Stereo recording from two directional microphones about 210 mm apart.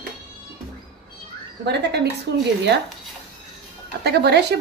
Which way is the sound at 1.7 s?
55° right (ahead or behind).